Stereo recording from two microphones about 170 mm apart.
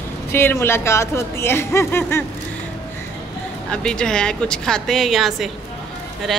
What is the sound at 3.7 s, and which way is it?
Speech, 5° left (ahead or behind).